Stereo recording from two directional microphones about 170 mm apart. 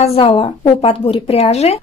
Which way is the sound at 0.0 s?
35° left (ahead or behind).